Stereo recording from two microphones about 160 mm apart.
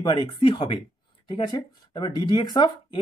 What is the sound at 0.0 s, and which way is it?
Speech, 30° left (ahead or behind).